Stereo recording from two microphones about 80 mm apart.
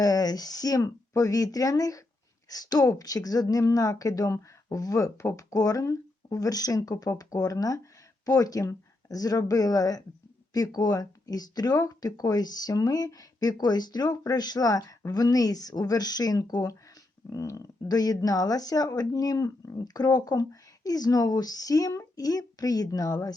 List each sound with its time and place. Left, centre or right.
0.0 s speech: left
17.8 s speech: left